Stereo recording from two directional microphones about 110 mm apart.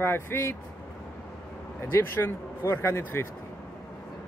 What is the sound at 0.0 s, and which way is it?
Speech, 20° left (ahead or behind).